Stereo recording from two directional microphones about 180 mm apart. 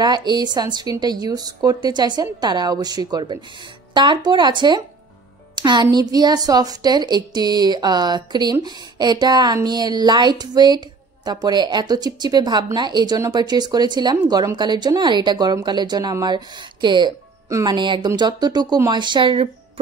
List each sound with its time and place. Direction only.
0.0 s speech: 25° right (ahead or behind)